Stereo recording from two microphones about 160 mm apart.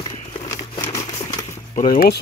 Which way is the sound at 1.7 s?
55° left (ahead or behind).